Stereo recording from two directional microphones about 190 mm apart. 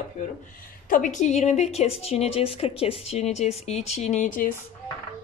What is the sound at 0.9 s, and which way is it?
A woman's voice, 40° left (ahead or behind).